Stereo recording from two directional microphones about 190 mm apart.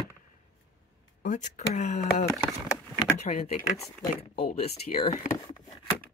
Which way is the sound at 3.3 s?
35° left (ahead or behind).